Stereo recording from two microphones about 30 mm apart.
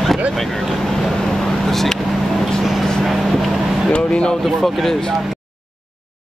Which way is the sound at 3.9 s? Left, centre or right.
Left.